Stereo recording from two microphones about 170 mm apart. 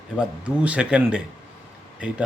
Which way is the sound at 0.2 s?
5° right (ahead or behind).